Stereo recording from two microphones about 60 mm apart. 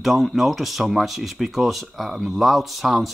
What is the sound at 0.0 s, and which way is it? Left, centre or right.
Speech, centre.